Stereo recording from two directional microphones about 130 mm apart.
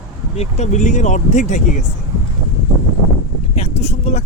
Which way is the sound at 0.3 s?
60° left (ahead or behind).